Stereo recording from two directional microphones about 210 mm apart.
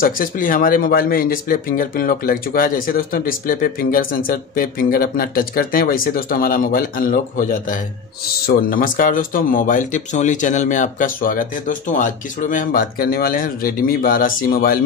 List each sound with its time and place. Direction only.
0.0 s speech: 40° left (ahead or behind)